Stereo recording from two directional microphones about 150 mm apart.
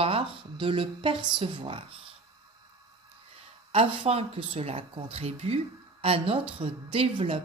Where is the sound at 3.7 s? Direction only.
40° right (ahead or behind).